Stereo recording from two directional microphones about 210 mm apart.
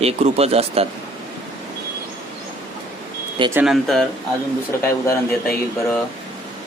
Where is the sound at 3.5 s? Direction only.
Centre (ahead or behind).